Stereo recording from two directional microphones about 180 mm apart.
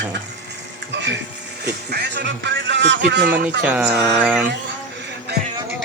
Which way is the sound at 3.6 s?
5° right (ahead or behind).